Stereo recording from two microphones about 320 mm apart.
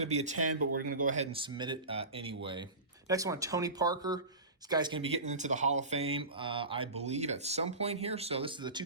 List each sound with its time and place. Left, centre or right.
0.0 s speech: centre